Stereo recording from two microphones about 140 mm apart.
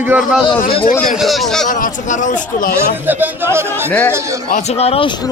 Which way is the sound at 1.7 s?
70° left (ahead or behind).